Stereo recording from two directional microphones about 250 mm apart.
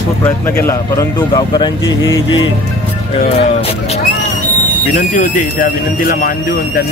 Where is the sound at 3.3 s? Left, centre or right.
Left.